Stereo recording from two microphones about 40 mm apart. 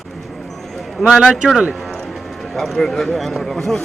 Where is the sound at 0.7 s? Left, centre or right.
Centre.